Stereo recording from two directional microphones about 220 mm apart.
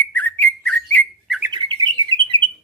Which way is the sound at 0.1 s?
5° left (ahead or behind).